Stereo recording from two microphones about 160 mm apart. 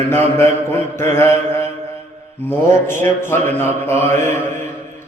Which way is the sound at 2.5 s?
15° left (ahead or behind).